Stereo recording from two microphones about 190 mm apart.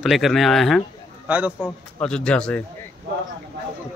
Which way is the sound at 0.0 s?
Centre (ahead or behind).